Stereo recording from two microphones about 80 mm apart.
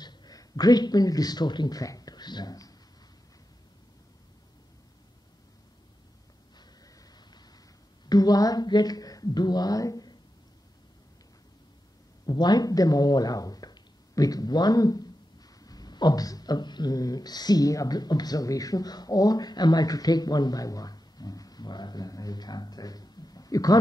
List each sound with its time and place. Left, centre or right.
0.0 s speech: left
7.0 s a sound: left
8.1 s speech: left
12.3 s speech: left